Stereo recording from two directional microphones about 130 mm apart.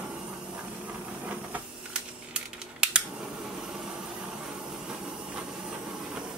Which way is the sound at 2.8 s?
5° right (ahead or behind).